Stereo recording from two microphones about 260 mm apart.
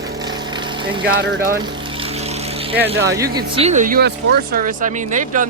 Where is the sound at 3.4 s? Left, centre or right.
Right.